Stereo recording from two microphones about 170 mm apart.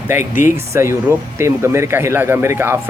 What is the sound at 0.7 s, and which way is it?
A man's voice, 15° right (ahead or behind).